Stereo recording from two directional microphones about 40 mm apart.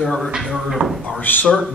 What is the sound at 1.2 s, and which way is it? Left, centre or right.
Speech, left.